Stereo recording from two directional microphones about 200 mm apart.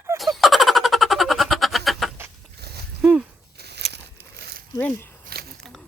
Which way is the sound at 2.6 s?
55° right (ahead or behind).